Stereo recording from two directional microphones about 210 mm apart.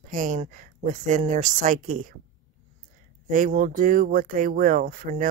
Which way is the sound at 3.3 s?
40° right (ahead or behind).